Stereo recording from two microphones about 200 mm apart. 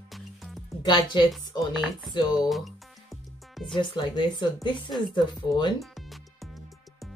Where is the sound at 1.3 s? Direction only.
Centre (ahead or behind).